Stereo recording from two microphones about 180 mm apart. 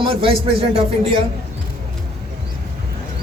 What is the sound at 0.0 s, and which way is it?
Speech, 30° right (ahead or behind).